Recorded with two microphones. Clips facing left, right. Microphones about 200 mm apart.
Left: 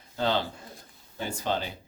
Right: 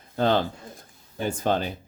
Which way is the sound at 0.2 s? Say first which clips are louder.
Right 5 dB; 50° right (ahead or behind).